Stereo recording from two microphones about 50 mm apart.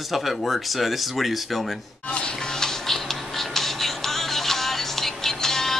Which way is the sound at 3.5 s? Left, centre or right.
Centre.